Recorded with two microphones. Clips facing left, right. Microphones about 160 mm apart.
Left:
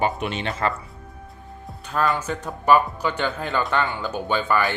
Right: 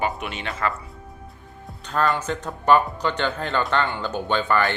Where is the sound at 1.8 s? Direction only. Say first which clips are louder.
Even; 5° left (ahead or behind).